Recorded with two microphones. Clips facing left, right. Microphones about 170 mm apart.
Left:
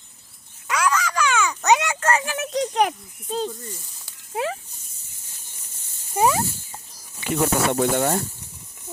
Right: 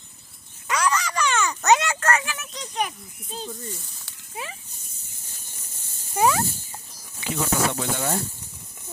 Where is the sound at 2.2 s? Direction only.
60° left (ahead or behind).